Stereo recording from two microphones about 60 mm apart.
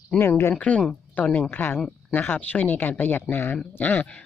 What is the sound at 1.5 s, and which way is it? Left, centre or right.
Speech, left.